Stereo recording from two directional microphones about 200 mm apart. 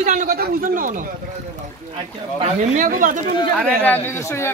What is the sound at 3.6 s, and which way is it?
Speech, 10° left (ahead or behind).